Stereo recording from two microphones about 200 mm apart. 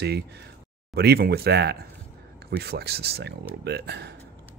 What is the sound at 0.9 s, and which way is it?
Speech, 55° right (ahead or behind).